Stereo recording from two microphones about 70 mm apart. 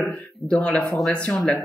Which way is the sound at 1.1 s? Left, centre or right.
Centre.